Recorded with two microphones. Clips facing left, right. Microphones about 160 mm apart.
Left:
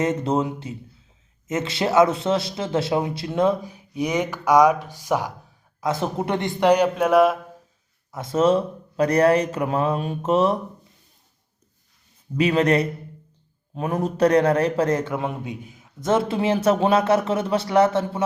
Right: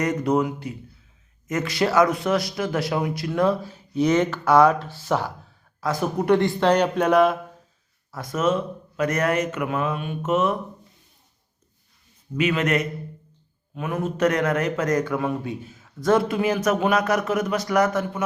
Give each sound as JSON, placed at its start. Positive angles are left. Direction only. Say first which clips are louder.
{"t": 0.0, "sound": "a man's voice", "louder": "even", "side_deg": 25}
{"t": 5.8, "sound": "speech", "louder": "even", "side_deg": 25}
{"t": 8.1, "sound": "speech", "louder": "left 4 dB", "side_deg": 25}
{"t": 12.4, "sound": "a man's voice", "louder": "left 3 dB", "side_deg": 35}